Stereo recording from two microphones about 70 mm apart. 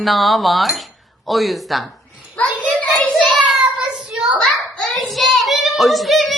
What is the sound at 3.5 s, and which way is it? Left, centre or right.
Child singing, centre.